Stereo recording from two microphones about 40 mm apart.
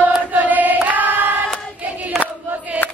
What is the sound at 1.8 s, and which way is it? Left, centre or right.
Choir, right.